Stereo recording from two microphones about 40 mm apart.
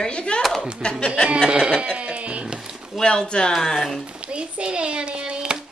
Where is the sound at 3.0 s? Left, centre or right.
Centre.